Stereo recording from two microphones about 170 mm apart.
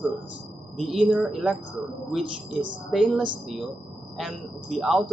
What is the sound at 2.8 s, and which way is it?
Speech, 5° right (ahead or behind).